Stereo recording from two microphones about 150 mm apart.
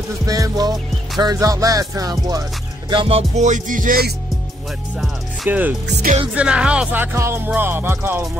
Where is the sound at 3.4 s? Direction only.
55° right (ahead or behind); by 4.1 s 75° right (ahead or behind).